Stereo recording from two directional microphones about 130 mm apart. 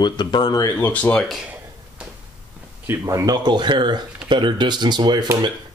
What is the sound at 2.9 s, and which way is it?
Speech, 25° right (ahead or behind).